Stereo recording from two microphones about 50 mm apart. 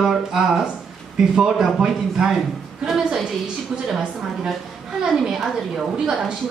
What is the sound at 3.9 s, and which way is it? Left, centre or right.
A woman's voice, centre.